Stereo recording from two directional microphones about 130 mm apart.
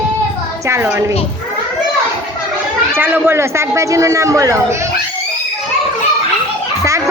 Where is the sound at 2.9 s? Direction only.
15° right (ahead or behind).